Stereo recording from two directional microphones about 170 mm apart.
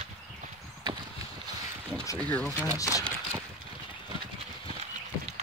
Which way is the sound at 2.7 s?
20° left (ahead or behind).